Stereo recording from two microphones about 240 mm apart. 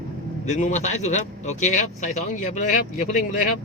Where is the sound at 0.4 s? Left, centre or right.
Left.